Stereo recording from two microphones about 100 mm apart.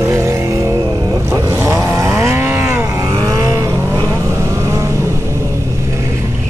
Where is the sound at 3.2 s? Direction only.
35° right (ahead or behind).